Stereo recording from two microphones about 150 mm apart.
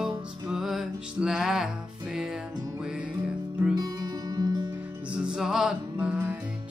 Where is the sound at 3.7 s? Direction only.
25° right (ahead or behind).